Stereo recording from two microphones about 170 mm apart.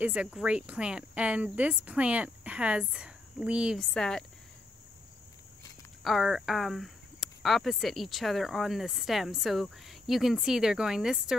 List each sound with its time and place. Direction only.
0.0 s cricket: 5° right (ahead or behind)
6.0 s speech: centre (ahead or behind)